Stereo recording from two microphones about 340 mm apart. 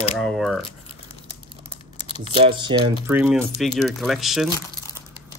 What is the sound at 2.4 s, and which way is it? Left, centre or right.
Speech, centre.